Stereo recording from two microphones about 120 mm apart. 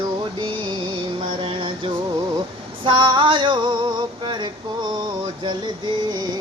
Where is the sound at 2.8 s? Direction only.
40° right (ahead or behind).